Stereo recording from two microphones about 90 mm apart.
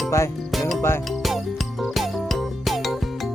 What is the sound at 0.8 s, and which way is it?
Music, 25° left (ahead or behind).